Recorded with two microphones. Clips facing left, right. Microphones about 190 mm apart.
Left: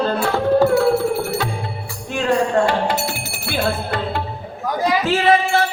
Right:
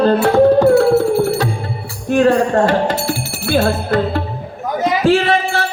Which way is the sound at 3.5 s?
45° right (ahead or behind).